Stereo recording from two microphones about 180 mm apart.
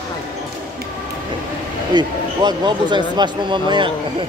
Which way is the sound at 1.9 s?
25° right (ahead or behind).